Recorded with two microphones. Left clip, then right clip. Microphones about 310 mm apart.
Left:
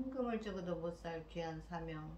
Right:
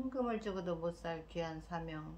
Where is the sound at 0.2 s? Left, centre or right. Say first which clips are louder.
Right 3 dB; centre.